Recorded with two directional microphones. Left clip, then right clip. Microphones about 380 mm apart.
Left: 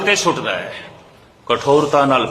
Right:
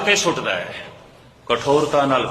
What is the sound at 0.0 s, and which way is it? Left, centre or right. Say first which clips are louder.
A man's voice: left 2 dB; centre.